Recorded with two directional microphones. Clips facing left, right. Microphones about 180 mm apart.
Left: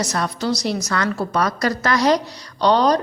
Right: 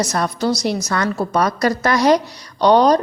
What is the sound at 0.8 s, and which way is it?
Speech, 20° right (ahead or behind).